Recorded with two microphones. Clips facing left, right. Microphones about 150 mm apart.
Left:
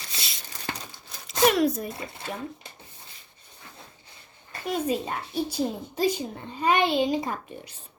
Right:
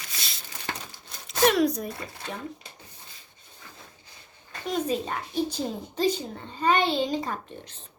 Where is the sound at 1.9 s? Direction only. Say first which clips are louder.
Left 1 dB; 25° left (ahead or behind).